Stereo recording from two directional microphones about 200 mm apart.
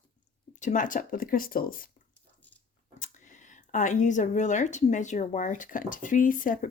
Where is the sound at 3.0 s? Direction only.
40° left (ahead or behind).